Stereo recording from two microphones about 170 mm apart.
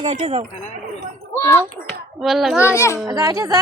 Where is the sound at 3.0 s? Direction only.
20° right (ahead or behind).